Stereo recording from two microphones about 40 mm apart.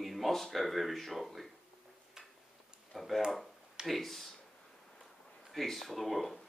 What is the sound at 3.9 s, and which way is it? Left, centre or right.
Speech, centre.